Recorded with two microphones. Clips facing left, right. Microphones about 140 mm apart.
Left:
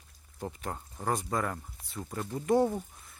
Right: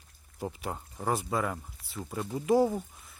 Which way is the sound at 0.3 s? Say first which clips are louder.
Right 2 dB; 10° right (ahead or behind).